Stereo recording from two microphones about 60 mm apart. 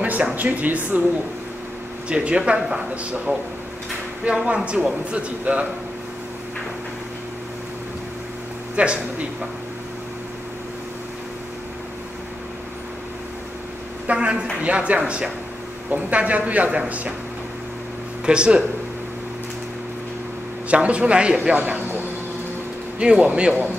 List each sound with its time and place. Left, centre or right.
0.0 s a woman's voice: right
2.0 s a woman's voice: centre
8.7 s speech: centre
14.0 s a woman's voice: centre
18.2 s speech: centre
20.6 s a woman's voice: right
22.9 s speech: centre